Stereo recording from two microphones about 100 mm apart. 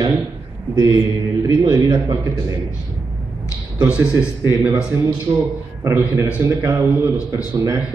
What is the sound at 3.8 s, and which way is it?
Speech, 10° right (ahead or behind).